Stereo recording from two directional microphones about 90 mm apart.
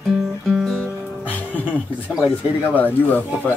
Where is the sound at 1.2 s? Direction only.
20° left (ahead or behind).